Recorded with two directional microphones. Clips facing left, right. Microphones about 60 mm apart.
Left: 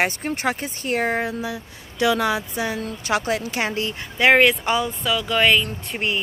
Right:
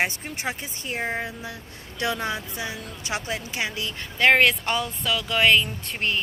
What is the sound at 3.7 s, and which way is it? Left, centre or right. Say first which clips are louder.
Speech: left 6 dB; left.